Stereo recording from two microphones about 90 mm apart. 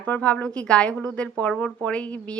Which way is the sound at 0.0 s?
15° left (ahead or behind).